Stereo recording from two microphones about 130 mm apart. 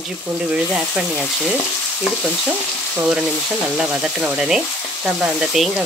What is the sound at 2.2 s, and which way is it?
Frying, 10° right (ahead or behind).